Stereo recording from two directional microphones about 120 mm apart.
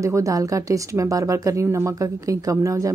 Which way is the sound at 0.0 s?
25° right (ahead or behind).